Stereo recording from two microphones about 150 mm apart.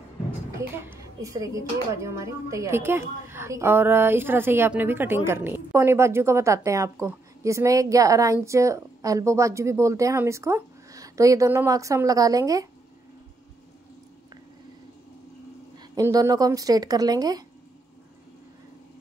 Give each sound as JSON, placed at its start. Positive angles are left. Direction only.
{"t": 0.6, "sound": "speech", "side_deg": -20}
{"t": 15.9, "sound": "speech", "side_deg": -25}